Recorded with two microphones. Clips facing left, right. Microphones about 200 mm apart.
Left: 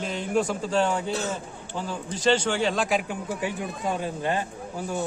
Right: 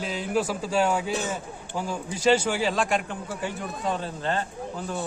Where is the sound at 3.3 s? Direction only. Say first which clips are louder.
Left 2 dB; 15° left (ahead or behind).